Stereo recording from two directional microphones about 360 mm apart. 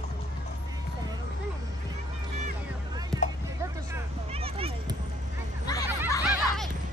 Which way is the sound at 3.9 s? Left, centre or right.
Centre.